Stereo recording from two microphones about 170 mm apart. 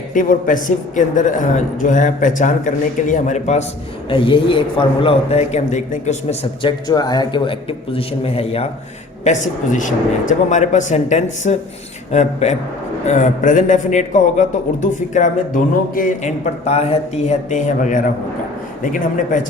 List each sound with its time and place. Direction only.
0.1 s a man's voice: 50° left (ahead or behind)
4.1 s a man's voice: 30° left (ahead or behind)
6.6 s a man's voice: 25° left (ahead or behind)
9.2 s a man's voice: 45° left (ahead or behind)